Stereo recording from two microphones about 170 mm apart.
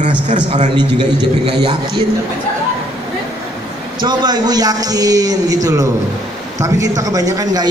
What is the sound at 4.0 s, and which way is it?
A man's voice, 25° right (ahead or behind).